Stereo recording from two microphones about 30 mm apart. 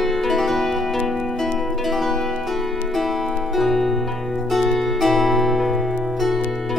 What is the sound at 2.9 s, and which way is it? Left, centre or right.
Music, centre.